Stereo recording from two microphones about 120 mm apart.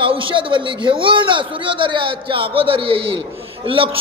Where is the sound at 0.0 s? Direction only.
45° right (ahead or behind).